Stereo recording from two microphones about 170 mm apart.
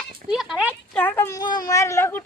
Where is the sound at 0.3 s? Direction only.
5° right (ahead or behind).